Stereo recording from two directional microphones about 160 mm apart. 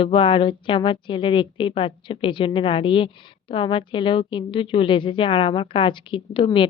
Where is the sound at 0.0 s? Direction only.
35° left (ahead or behind).